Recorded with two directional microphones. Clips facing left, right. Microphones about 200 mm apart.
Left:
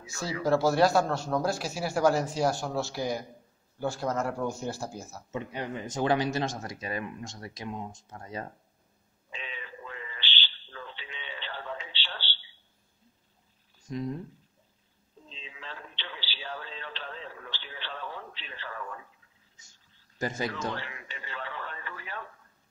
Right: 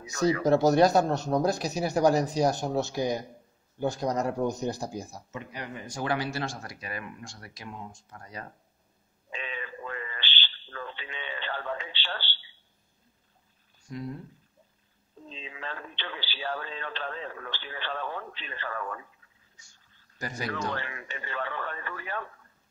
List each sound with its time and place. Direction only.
0.4 s speech: 20° right (ahead or behind)
5.3 s speech: 25° left (ahead or behind)
9.3 s radio: 50° right (ahead or behind)
13.8 s speech: 20° left (ahead or behind)
15.2 s radio: 50° right (ahead or behind)
20.2 s speech: 25° left (ahead or behind)
20.7 s radio: 50° right (ahead or behind)